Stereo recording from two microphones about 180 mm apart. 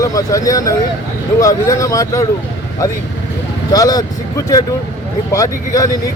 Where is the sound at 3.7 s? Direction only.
20° left (ahead or behind).